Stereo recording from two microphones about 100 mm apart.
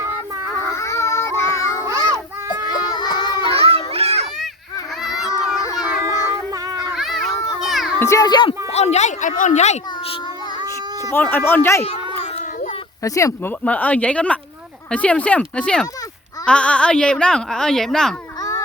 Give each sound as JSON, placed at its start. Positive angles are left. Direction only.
{"t": 0.7, "sound": "child singing", "side_deg": 30}
{"t": 1.8, "sound": "child singing", "side_deg": -30}
{"t": 2.6, "sound": "child singing", "side_deg": 45}
{"t": 3.5, "sound": "children playing", "side_deg": -75}
{"t": 5.6, "sound": "a sound", "side_deg": 35}
{"t": 6.9, "sound": "children playing", "side_deg": 0}
{"t": 7.9, "sound": "speech", "side_deg": 30}
{"t": 8.3, "sound": "speech", "side_deg": 50}
{"t": 8.7, "sound": "speech", "side_deg": 90}
{"t": 11.1, "sound": "speech", "side_deg": 20}
{"t": 13.0, "sound": "speech", "side_deg": 30}
{"t": 13.7, "sound": "speech", "side_deg": 15}